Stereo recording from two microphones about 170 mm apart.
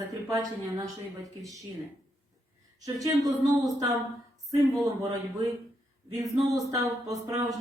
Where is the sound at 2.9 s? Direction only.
20° right (ahead or behind).